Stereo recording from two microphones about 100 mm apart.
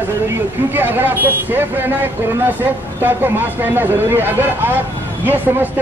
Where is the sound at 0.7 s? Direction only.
20° right (ahead or behind).